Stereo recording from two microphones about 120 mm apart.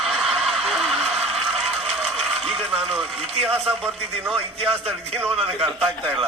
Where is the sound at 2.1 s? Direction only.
55° right (ahead or behind).